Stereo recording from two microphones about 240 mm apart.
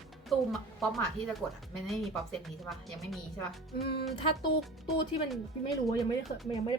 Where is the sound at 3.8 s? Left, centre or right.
Left.